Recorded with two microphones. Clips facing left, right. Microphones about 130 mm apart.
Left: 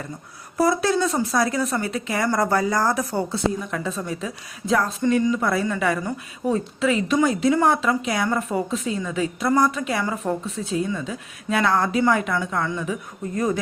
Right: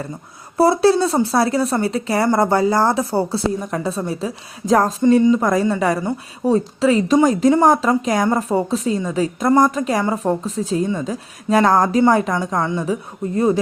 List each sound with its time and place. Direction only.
0.5 s a woman's voice: 30° right (ahead or behind)
5.1 s speech: 25° right (ahead or behind)
5.4 s a woman's voice: 40° right (ahead or behind)